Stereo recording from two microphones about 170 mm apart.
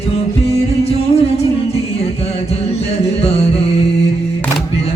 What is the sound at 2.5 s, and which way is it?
Music, 35° left (ahead or behind).